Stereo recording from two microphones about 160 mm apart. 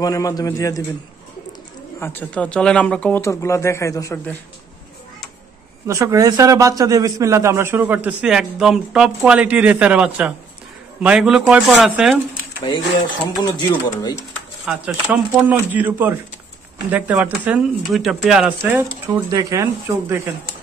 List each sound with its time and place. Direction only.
0.0 s speech: 20° left (ahead or behind)
2.0 s speech: 15° left (ahead or behind)
5.9 s a man's voice: 20° right (ahead or behind); by 12.2 s 5° right (ahead or behind)
12.7 s speech: 30° left (ahead or behind)
14.7 s a man's voice: 5° right (ahead or behind)
19.1 s speech: 20° right (ahead or behind)